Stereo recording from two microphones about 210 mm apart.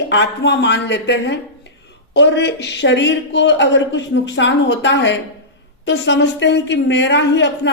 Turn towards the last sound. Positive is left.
turn(degrees=55)  # may be behind; listen again after turning